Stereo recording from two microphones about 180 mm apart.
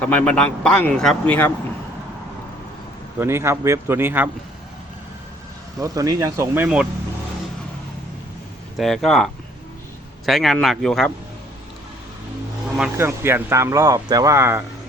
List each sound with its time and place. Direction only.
0.0 s speech: 5° left (ahead or behind)
3.2 s speech: 15° right (ahead or behind)
5.8 s speech: 20° right (ahead or behind)
8.8 s a man's voice: centre (ahead or behind)
13.0 s speech: 15° right (ahead or behind)